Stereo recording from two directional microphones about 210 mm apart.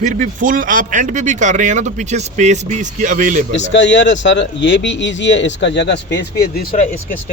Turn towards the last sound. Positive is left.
turn(degrees=45)  # may be behind; listen again after turning